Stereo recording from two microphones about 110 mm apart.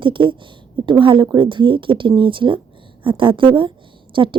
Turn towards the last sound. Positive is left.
turn(degrees=-50)  # may be behind; listen again after turning